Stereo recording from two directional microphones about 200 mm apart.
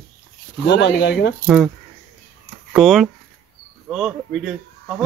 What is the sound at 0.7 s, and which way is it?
Speech, 60° left (ahead or behind).